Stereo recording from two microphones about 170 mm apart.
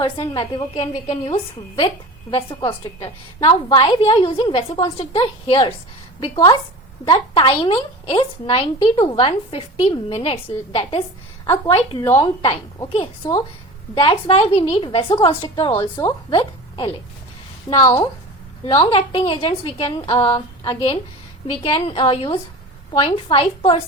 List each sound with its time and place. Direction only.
0.0 s a woman's voice: 30° left (ahead or behind)
2.6 s a woman's voice: 30° left (ahead or behind)
11.4 s a woman's voice: 15° left (ahead or behind)
12.1 s a woman's voice: 30° left (ahead or behind)
17.7 s a woman's voice: 25° left (ahead or behind)